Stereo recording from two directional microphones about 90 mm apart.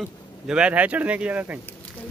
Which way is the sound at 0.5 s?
10° right (ahead or behind).